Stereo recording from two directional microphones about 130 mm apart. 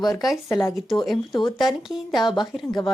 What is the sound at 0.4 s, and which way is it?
Speech, 20° left (ahead or behind).